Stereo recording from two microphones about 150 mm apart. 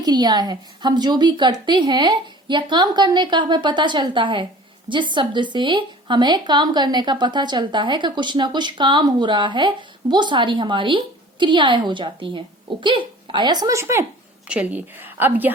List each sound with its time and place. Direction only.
0.0 s a woman's voice: 25° right (ahead or behind)
14.4 s a woman's voice: 10° right (ahead or behind)